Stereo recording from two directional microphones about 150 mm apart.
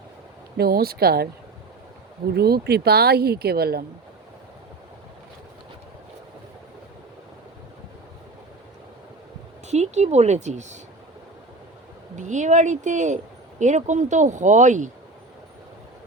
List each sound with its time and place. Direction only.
0.5 s speech: 90° right
2.3 s speech: 90° right
9.6 s speech: 50° right (ahead or behind)
12.1 s speech: 55° right (ahead or behind)